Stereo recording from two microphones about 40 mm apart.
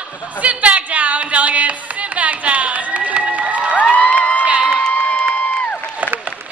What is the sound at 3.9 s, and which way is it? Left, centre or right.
Crowd, left.